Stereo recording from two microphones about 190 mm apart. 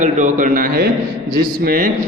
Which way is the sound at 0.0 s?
40° right (ahead or behind).